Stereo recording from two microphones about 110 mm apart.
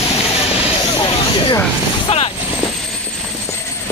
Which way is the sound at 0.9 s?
50° left (ahead or behind).